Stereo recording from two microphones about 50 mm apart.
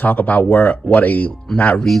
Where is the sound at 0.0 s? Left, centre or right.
Left.